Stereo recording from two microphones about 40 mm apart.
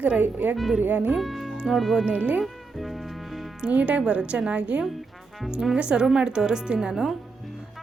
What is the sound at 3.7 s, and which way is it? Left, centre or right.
A woman's voice, right.